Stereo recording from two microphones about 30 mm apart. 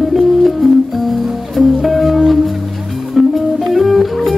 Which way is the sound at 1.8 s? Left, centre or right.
Centre.